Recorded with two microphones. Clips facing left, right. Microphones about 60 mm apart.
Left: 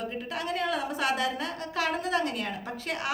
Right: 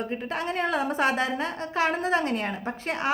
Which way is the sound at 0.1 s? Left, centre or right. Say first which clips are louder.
Right 3 dB; right.